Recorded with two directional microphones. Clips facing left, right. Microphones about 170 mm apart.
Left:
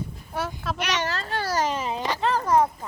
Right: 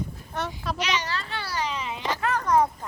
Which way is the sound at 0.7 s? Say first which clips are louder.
Left 2 dB; 55° left (ahead or behind).